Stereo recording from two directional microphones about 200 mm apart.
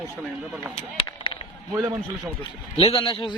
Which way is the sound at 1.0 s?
25° left (ahead or behind).